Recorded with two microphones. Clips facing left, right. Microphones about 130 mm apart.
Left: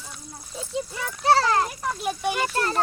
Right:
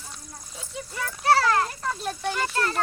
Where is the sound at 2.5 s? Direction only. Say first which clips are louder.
Left 1 dB; 30° left (ahead or behind).